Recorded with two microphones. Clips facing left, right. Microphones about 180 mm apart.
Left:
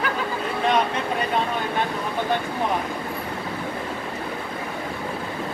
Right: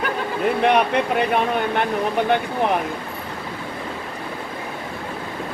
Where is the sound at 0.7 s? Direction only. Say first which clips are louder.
Right 2 dB; 65° right (ahead or behind).